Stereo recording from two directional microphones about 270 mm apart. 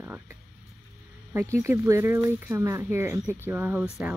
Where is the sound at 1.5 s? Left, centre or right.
Centre.